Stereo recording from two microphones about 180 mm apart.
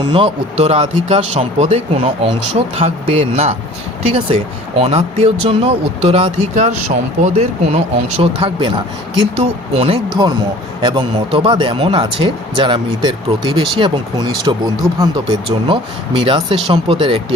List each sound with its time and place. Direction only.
0.1 s speech: 35° right (ahead or behind)